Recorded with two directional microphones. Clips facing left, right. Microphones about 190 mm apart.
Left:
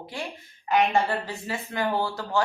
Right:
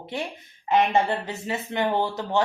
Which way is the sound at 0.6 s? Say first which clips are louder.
Right 2 dB; 20° right (ahead or behind).